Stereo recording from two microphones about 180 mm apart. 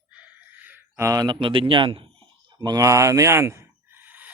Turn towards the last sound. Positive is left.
turn(degrees=-10)  # may be behind; listen again after turning